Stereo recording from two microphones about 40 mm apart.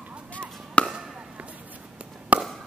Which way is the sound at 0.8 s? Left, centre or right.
Left.